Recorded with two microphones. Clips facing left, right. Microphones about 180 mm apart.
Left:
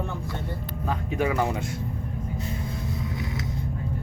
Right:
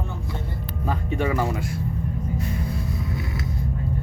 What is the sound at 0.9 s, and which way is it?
Speech, 5° left (ahead or behind).